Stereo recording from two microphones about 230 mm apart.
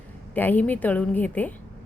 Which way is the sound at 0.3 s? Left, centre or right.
Centre.